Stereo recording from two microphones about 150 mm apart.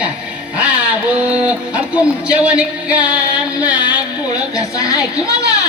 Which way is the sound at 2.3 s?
10° right (ahead or behind).